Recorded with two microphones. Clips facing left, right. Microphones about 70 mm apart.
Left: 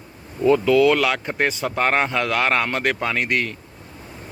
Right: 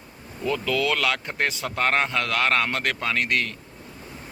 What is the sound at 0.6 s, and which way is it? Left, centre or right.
Speech, centre.